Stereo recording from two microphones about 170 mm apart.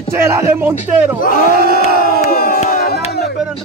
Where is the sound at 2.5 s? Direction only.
60° left (ahead or behind).